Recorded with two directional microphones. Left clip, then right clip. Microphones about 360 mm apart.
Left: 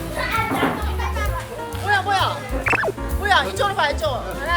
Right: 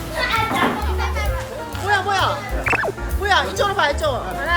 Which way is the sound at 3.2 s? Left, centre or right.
Centre.